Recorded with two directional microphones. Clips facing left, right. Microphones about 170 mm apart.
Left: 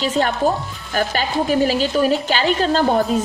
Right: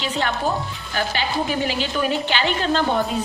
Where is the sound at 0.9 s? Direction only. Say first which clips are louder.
Left 4 dB; 45° left (ahead or behind).